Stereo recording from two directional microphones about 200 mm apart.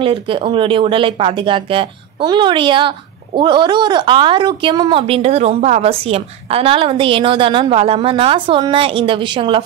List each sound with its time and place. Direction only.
0.0 s speech: 25° right (ahead or behind)